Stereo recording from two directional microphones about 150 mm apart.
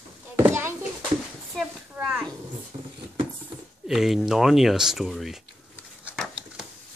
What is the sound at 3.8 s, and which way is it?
Speech, centre (ahead or behind).